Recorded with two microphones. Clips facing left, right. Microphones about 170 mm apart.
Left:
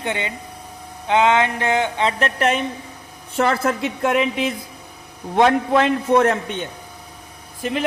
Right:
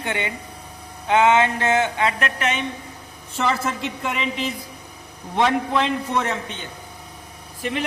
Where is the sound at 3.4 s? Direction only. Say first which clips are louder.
Left 4 dB; 55° left (ahead or behind).